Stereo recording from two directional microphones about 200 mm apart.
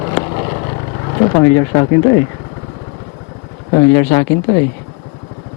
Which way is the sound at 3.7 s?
20° left (ahead or behind).